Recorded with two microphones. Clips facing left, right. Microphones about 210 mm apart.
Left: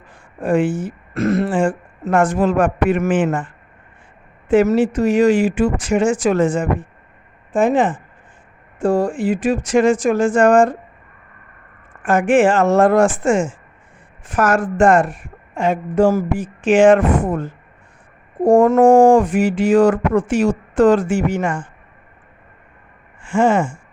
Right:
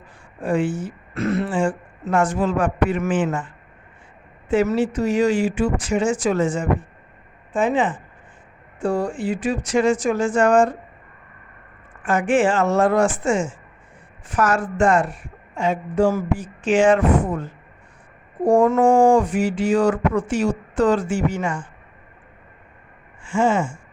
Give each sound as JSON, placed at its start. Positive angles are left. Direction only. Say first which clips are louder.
{"t": 0.4, "sound": "speech", "louder": "left 4 dB", "side_deg": 55}
{"t": 0.7, "sound": "a sound", "louder": "left 4 dB", "side_deg": 90}
{"t": 1.1, "sound": "speech", "louder": "left 4 dB", "side_deg": 45}
{"t": 4.7, "sound": "speech", "louder": "left 5 dB", "side_deg": 55}
{"t": 9.1, "sound": "a sound", "louder": "left 5 dB", "side_deg": 90}
{"t": 9.8, "sound": "speech", "louder": "left 4 dB", "side_deg": 60}
{"t": 12.0, "sound": "speech", "louder": "left 5 dB", "side_deg": 50}
{"t": 16.4, "sound": "a sound", "louder": "left 5 dB", "side_deg": 90}
{"t": 16.8, "sound": "speech", "louder": "left 5 dB", "side_deg": 50}
{"t": 18.4, "sound": "speech", "louder": "left 5 dB", "side_deg": 50}
{"t": 19.4, "sound": "a sound", "louder": "left 4 dB", "side_deg": 90}
{"t": 19.7, "sound": "speech", "louder": "left 6 dB", "side_deg": 50}
{"t": 23.2, "sound": "speech", "louder": "left 4 dB", "side_deg": 55}